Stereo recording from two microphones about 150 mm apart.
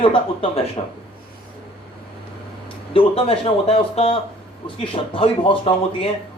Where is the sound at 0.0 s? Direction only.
35° left (ahead or behind).